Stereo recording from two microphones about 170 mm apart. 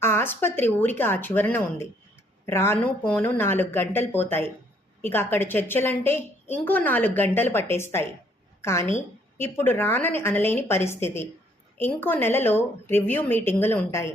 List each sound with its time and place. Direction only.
0.0 s a woman's voice: 15° left (ahead or behind)